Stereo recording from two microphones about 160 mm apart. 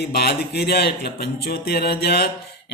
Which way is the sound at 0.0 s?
85° left.